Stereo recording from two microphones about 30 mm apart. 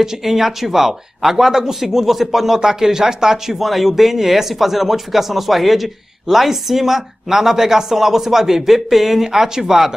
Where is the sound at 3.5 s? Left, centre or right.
Centre.